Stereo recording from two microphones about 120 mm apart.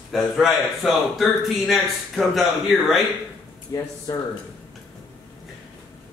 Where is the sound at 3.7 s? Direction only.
30° left (ahead or behind).